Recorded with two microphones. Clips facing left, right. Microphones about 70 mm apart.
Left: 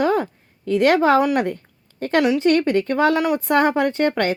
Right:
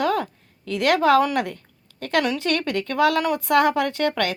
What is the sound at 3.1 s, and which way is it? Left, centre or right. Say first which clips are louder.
A woman's voice: left 1 dB; centre.